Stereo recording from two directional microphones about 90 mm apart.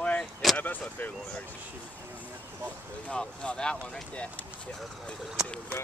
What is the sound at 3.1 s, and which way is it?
Speech, 10° left (ahead or behind).